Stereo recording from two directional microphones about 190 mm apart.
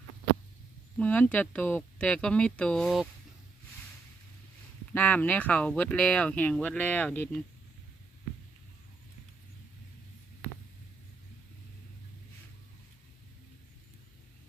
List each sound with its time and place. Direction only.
0.9 s speech: 5° left (ahead or behind)
4.9 s speech: 10° left (ahead or behind)